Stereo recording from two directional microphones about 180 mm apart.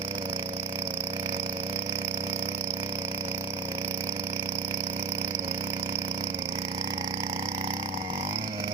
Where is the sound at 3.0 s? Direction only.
15° right (ahead or behind).